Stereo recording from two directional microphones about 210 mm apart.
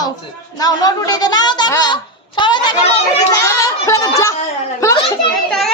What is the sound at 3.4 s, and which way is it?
Music, 15° left (ahead or behind).